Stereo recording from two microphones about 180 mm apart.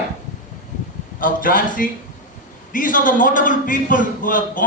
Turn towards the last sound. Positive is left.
turn(degrees=50)  # may be behind; listen again after turning